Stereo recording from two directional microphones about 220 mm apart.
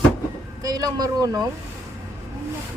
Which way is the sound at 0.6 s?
15° right (ahead or behind).